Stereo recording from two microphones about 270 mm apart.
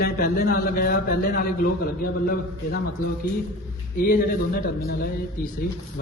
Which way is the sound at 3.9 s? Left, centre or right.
Left.